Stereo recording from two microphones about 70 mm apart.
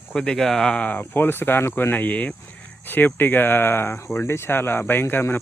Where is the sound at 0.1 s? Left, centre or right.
Centre.